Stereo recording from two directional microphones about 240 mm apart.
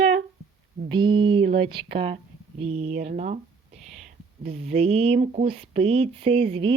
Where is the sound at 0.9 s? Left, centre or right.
Centre.